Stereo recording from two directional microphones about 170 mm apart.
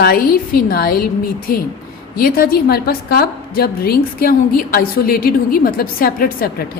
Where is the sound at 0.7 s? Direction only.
60° left (ahead or behind).